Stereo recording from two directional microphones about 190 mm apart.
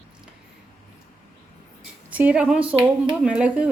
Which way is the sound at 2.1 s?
5° right (ahead or behind).